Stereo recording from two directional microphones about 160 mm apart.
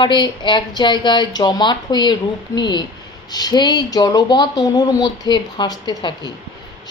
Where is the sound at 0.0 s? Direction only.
30° left (ahead or behind).